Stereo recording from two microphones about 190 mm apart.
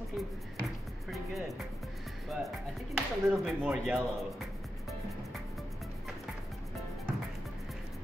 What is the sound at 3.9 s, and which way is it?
Music, centre (ahead or behind).